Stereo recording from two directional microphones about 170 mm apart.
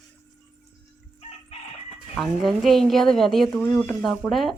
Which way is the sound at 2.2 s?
Centre (ahead or behind).